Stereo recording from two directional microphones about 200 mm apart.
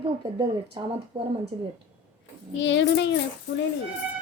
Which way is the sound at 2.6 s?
60° left (ahead or behind).